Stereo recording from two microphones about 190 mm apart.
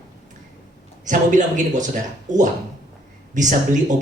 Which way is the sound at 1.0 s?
40° right (ahead or behind).